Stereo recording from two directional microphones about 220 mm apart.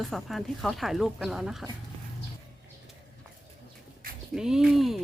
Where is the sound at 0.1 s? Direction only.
Centre (ahead or behind).